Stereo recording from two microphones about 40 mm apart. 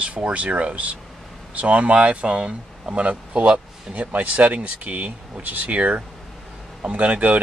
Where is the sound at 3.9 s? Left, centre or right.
Right.